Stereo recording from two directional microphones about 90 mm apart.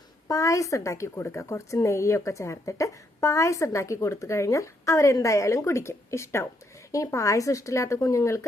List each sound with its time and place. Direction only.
0.3 s a woman's voice: 40° left (ahead or behind)